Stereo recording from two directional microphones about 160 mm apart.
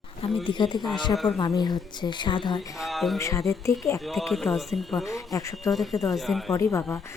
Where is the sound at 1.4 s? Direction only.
25° left (ahead or behind).